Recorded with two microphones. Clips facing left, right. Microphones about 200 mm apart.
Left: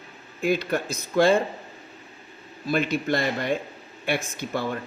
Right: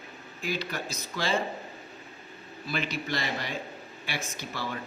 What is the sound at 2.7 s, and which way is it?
Speech, 50° left (ahead or behind).